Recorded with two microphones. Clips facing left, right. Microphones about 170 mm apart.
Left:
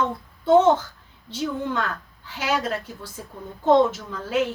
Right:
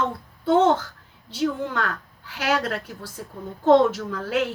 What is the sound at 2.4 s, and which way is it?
Speech, 70° right (ahead or behind).